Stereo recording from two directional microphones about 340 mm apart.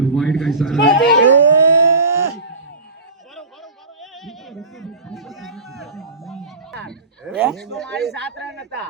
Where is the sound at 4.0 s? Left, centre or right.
Centre.